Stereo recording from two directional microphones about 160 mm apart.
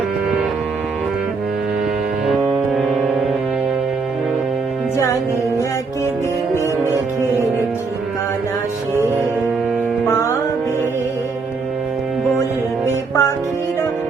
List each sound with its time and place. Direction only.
12.8 s music: 15° left (ahead or behind)